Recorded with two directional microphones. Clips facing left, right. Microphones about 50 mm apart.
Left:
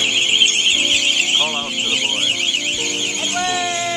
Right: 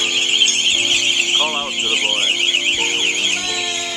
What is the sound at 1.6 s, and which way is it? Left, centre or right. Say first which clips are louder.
Speech: right 1 dB; centre.